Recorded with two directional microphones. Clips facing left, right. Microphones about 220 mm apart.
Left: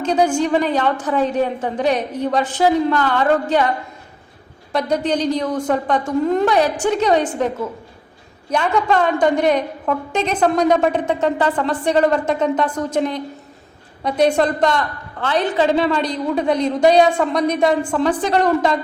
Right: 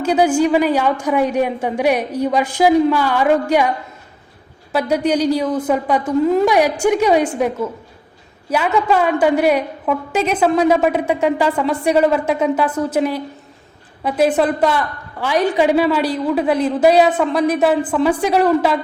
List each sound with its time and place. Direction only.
0.0 s a woman's voice: 10° right (ahead or behind)
4.7 s a woman's voice: 5° right (ahead or behind)